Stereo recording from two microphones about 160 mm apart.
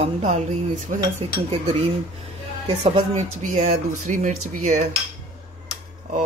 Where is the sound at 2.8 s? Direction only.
45° right (ahead or behind).